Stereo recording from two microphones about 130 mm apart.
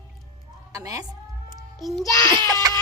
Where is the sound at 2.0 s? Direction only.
25° left (ahead or behind).